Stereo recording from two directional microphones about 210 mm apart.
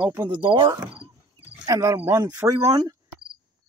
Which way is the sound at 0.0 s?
10° right (ahead or behind).